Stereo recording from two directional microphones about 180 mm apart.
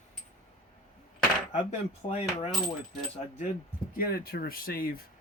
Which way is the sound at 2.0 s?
40° left (ahead or behind).